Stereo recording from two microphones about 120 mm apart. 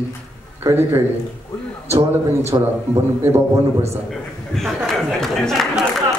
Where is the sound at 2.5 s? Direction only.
35° right (ahead or behind).